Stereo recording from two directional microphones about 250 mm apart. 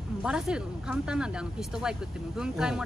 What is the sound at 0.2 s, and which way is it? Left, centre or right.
Speech, centre.